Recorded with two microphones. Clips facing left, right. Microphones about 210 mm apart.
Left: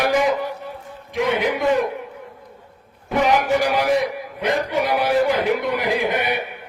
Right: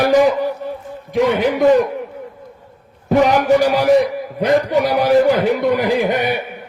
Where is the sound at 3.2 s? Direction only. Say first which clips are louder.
Right 3 dB; 40° right (ahead or behind).